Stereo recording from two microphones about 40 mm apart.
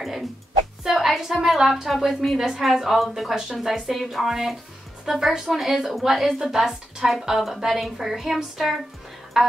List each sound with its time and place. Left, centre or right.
0.0 s a woman's voice: centre
9.3 s music: centre